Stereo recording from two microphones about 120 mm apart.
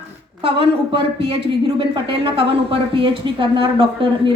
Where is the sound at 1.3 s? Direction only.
50° right (ahead or behind).